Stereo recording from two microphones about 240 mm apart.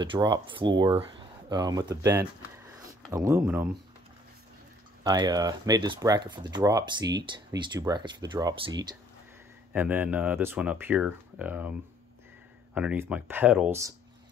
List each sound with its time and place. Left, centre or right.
0.0 s speech: centre
5.0 s speech: centre
12.7 s speech: centre